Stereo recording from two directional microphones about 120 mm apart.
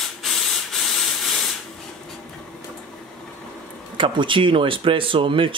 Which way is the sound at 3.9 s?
45° right (ahead or behind).